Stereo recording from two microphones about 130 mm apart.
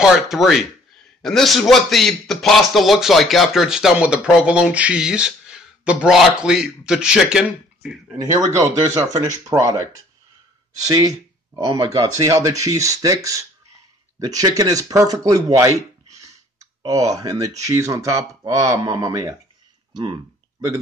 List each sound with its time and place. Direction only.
0.0 s speech: centre (ahead or behind)
8.2 s speech: 25° right (ahead or behind)